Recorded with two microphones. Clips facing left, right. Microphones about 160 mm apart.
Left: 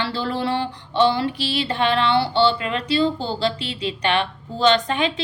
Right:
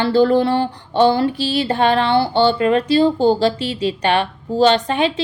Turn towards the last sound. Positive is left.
turn(degrees=-35)  # may be behind; listen again after turning